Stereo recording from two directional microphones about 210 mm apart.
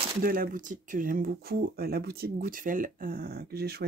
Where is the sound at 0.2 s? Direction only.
45° right (ahead or behind).